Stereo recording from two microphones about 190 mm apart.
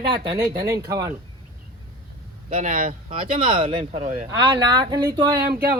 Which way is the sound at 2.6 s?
45° right (ahead or behind).